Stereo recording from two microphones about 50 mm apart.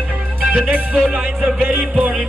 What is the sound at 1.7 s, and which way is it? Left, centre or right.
Music, right.